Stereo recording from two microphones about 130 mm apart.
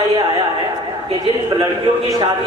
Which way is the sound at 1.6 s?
35° right (ahead or behind).